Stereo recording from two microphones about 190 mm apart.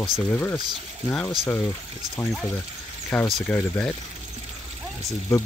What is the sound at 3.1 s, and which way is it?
Speech, 10° left (ahead or behind).